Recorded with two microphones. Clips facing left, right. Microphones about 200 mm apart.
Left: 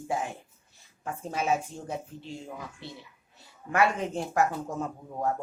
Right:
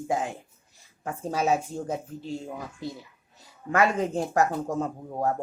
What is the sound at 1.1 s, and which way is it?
Speech, 35° right (ahead or behind).